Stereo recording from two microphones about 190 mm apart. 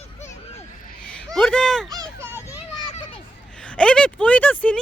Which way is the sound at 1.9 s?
20° right (ahead or behind).